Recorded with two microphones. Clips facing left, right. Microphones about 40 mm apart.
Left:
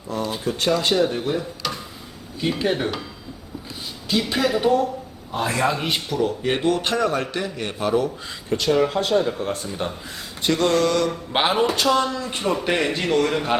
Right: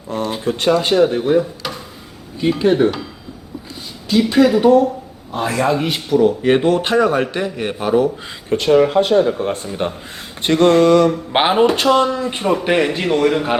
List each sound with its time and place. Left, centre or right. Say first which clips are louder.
0.1 s speech: right 5 dB; right
0.7 s speech: right 6 dB; right
2.4 s a man's voice: right 8 dB; centre
4.1 s a man's voice: right 8 dB; centre
8.4 s speech: right 6 dB; right
10.8 s speech: right 9 dB; right
12.4 s a man's voice: right 5 dB; centre